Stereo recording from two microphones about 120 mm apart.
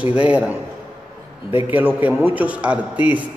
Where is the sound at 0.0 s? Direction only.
10° right (ahead or behind).